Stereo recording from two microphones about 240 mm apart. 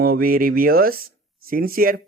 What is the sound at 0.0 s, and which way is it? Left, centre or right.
Speech, right.